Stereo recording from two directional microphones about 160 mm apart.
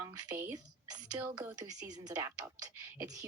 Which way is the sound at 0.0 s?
20° right (ahead or behind).